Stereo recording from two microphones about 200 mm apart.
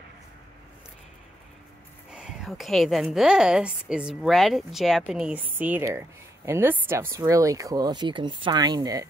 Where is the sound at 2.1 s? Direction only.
5° right (ahead or behind).